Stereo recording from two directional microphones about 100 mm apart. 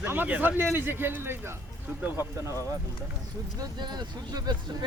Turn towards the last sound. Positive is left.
turn(degrees=-45)  # may be behind; listen again after turning